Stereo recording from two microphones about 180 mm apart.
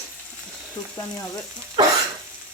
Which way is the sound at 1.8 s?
25° right (ahead or behind).